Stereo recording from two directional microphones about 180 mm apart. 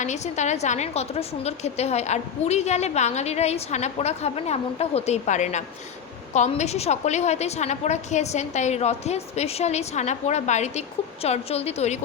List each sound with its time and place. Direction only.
0.0 s a woman's voice: 40° left (ahead or behind)